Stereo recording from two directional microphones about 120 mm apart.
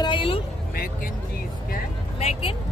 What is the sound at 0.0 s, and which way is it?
Speech, 45° left (ahead or behind).